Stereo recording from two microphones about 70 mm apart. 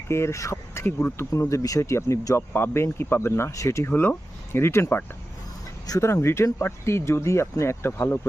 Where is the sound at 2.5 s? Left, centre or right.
Left.